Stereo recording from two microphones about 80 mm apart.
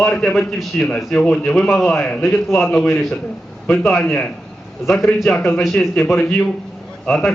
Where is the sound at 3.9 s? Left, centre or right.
Centre.